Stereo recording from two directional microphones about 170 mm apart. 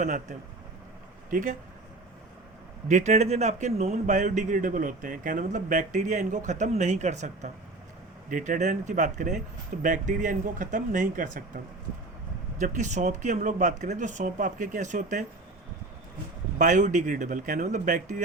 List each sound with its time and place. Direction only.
0.0 s a man's voice: 45° right (ahead or behind)
2.9 s a man's voice: 40° right (ahead or behind)
16.6 s a man's voice: 45° right (ahead or behind)